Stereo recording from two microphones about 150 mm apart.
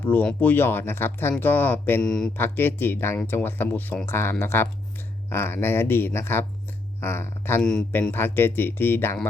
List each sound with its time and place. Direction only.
0.0 s speech: 10° left (ahead or behind)
2.0 s speech: 5° left (ahead or behind)
2.3 s speech: 15° left (ahead or behind)
7.6 s speech: 5° left (ahead or behind)